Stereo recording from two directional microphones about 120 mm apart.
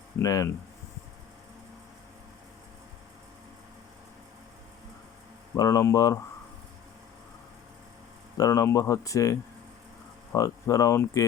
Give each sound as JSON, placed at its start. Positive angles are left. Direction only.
{"t": 0.2, "sound": "speech", "side_deg": 30}
{"t": 5.5, "sound": "speech", "side_deg": 25}
{"t": 8.4, "sound": "speech", "side_deg": 25}
{"t": 10.3, "sound": "speech", "side_deg": 30}